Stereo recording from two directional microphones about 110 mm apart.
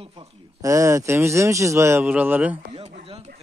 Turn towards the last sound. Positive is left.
turn(degrees=-70)  # may be behind; listen again after turning